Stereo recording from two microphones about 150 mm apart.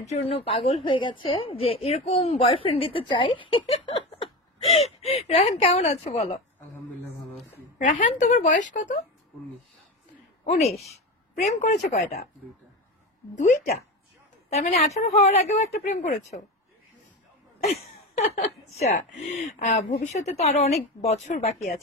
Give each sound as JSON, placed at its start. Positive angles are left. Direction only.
{"t": 0.0, "sound": "a woman's voice", "side_deg": 45}
{"t": 8.2, "sound": "speech", "side_deg": 55}
{"t": 10.4, "sound": "speech", "side_deg": 45}
{"t": 13.4, "sound": "a woman's voice", "side_deg": 55}
{"t": 15.1, "sound": "speech", "side_deg": 45}
{"t": 17.6, "sound": "speech", "side_deg": 45}